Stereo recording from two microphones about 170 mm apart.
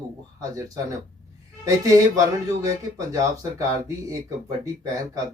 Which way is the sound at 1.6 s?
20° right (ahead or behind).